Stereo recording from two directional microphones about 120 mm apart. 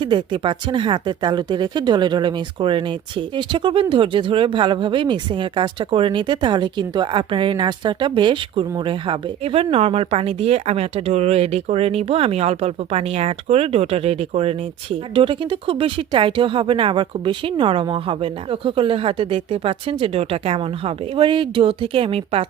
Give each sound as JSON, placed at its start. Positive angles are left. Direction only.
{"t": 0.0, "sound": "a woman's voice", "side_deg": -40}